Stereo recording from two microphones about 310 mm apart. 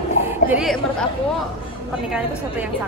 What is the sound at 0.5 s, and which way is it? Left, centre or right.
Chatter, centre.